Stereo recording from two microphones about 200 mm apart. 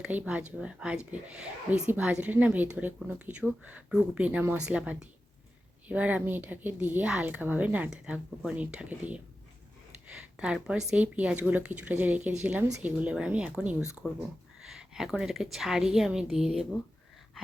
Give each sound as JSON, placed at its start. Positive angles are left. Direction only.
{"t": 0.0, "sound": "a woman's voice", "side_deg": -5}